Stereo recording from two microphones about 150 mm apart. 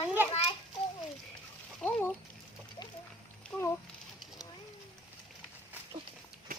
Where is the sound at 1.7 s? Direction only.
10° left (ahead or behind).